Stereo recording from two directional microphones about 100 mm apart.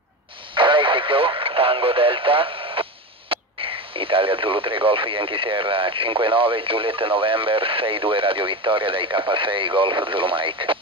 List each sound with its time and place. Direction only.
0.6 s radio: 55° right (ahead or behind)
1.4 s speech: 60° right (ahead or behind)